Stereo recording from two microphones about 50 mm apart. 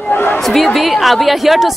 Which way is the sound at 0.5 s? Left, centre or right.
Centre.